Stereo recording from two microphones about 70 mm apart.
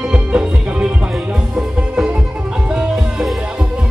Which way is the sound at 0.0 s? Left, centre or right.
Centre.